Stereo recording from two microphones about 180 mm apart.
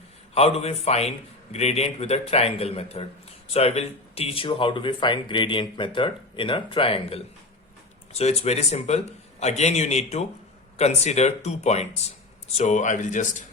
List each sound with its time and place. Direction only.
0.3 s a man's voice: 35° left (ahead or behind)